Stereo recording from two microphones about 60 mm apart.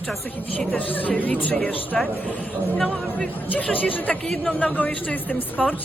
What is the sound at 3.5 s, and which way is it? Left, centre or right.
Speech, left.